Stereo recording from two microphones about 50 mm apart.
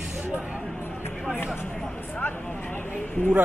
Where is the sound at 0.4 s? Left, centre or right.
Centre.